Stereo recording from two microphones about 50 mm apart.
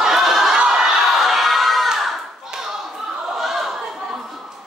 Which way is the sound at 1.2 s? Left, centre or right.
Centre.